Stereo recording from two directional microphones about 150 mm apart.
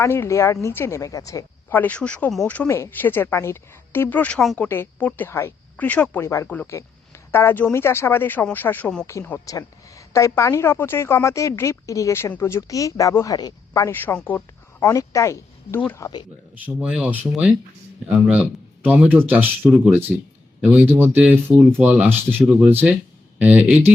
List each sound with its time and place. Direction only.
0.0 s a woman's voice: 20° left (ahead or behind)
16.6 s speech: 10° right (ahead or behind)
18.8 s speech: 10° right (ahead or behind)